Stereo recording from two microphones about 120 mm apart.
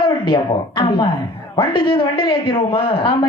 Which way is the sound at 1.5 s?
40° left (ahead or behind).